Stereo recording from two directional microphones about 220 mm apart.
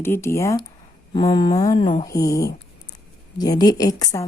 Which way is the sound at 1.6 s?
15° left (ahead or behind).